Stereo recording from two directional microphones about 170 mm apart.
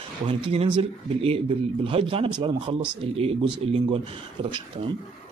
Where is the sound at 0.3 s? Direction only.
35° right (ahead or behind).